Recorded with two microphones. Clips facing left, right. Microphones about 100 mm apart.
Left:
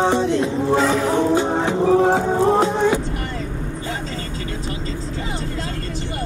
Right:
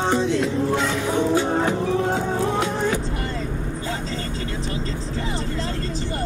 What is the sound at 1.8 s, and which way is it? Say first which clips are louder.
Music: left 6 dB; 30° left (ahead or behind).